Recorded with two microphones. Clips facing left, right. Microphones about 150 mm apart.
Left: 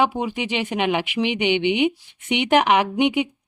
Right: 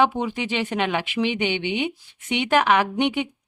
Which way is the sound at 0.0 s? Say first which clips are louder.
Even; 10° left (ahead or behind).